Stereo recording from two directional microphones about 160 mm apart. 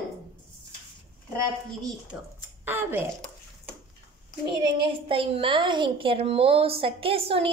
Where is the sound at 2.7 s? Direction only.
15° right (ahead or behind).